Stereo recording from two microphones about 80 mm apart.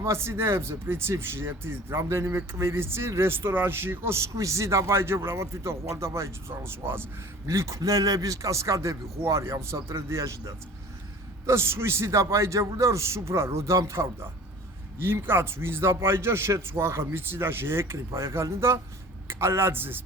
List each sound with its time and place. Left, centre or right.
0.0 s speech: right
7.4 s speech: right